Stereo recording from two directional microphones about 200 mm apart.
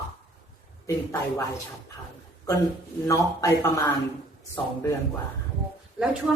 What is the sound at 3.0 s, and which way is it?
Speech, 15° left (ahead or behind).